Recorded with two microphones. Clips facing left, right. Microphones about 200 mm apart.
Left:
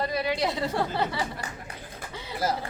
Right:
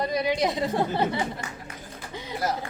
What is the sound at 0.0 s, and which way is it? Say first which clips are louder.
A woman's voice: right 2 dB; 15° right (ahead or behind).